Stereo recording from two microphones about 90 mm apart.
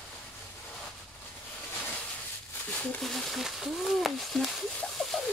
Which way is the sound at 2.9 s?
5° left (ahead or behind).